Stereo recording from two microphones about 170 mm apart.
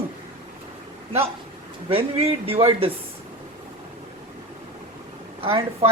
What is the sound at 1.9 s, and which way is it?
Speech, 35° right (ahead or behind).